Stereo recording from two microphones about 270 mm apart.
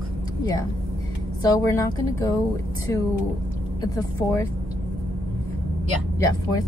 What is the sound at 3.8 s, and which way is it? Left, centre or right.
Speech, centre.